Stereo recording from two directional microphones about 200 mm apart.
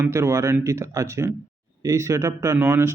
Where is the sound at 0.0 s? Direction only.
15° right (ahead or behind).